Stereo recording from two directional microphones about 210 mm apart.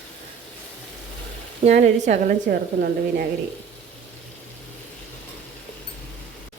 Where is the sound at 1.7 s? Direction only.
35° right (ahead or behind).